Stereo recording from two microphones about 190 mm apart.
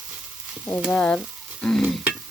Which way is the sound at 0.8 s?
Centre (ahead or behind).